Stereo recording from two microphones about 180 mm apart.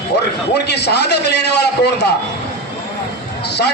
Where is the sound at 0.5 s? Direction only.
70° left (ahead or behind).